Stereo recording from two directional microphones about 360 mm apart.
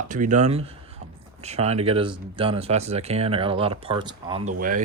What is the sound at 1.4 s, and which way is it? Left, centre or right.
Speech, centre.